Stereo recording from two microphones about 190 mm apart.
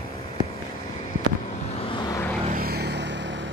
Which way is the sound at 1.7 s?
25° left (ahead or behind).